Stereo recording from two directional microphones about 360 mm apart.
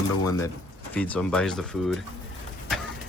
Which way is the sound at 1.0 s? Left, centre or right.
Centre.